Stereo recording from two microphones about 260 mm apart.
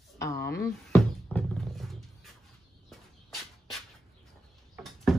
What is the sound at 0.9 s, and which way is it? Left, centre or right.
Music, centre.